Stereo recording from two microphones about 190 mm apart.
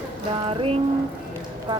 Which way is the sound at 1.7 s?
25° right (ahead or behind).